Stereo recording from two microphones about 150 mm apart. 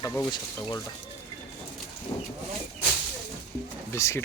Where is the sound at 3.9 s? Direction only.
20° left (ahead or behind).